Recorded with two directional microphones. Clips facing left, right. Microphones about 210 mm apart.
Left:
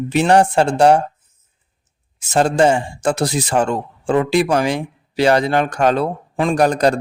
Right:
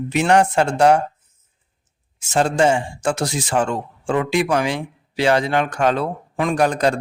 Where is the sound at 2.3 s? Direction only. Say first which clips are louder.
Left 3 dB; 40° left (ahead or behind).